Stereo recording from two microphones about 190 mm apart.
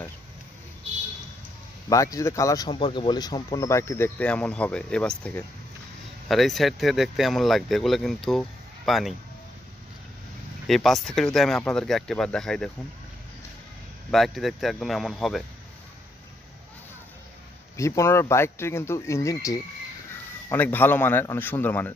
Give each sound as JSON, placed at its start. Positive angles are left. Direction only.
{"t": 1.9, "sound": "speech", "side_deg": 15}
{"t": 10.7, "sound": "speech", "side_deg": 0}
{"t": 14.1, "sound": "speech", "side_deg": 0}
{"t": 17.7, "sound": "speech", "side_deg": 15}